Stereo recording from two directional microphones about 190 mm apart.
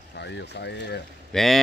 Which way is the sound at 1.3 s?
Centre (ahead or behind).